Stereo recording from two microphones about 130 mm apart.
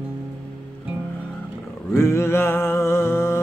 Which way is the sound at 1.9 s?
20° left (ahead or behind).